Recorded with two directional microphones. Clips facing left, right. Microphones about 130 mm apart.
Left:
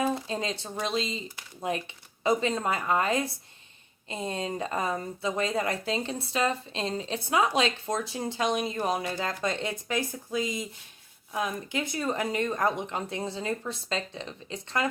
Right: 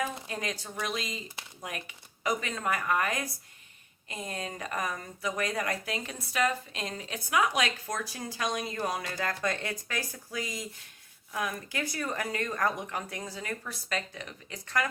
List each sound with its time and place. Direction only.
0.3 s speech: 25° left (ahead or behind)